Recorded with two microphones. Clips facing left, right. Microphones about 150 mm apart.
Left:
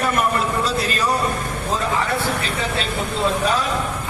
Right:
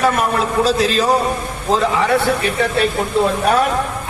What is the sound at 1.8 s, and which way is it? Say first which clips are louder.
Speech: right 7 dB; 75° right (ahead or behind).